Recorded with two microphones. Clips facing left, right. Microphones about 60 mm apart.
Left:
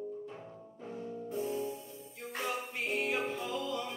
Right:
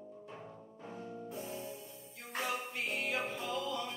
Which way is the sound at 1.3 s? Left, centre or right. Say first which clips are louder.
Left 10 dB; centre.